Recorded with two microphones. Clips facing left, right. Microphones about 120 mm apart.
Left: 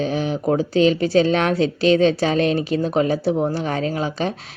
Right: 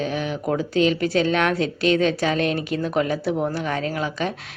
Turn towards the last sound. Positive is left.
turn(degrees=35)  # may be behind; listen again after turning